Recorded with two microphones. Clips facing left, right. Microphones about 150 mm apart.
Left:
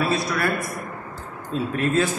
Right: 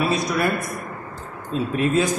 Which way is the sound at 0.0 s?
20° right (ahead or behind).